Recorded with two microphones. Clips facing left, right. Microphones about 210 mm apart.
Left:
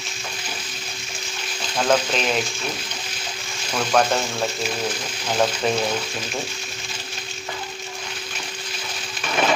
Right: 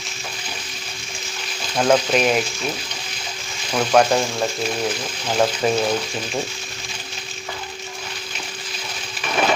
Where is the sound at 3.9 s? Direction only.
10° right (ahead or behind).